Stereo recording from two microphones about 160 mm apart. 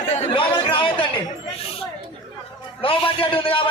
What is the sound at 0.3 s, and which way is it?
Chatter, 30° left (ahead or behind).